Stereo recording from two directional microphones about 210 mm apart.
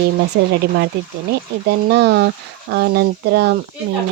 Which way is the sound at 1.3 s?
50° right (ahead or behind).